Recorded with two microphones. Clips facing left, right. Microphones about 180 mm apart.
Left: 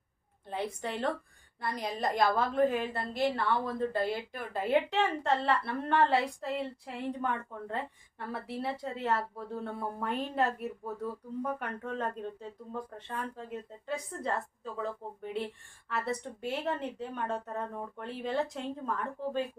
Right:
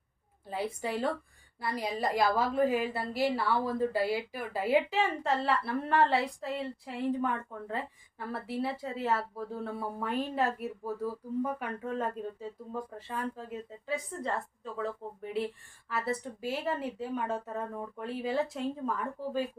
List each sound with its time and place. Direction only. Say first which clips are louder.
0.4 s a woman's voice: right 1 dB; 5° right (ahead or behind)